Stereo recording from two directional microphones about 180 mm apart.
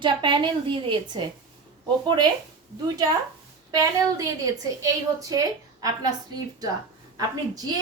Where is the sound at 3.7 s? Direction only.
20° right (ahead or behind).